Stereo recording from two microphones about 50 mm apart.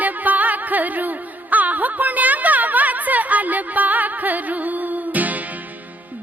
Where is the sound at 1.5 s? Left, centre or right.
Right.